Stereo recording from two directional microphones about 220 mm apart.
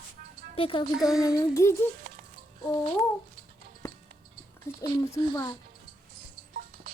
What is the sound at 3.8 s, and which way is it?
Music, 15° left (ahead or behind).